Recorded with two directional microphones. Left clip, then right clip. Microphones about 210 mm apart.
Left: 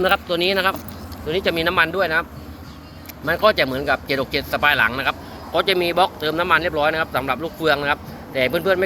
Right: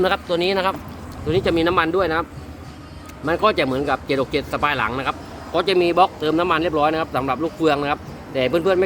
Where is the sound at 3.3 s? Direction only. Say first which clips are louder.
Left 1 dB; 15° right (ahead or behind).